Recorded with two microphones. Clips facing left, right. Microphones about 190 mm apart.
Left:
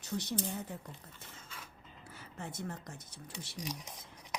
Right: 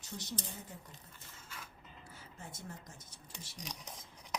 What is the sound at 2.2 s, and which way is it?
A woman's voice, 65° left (ahead or behind).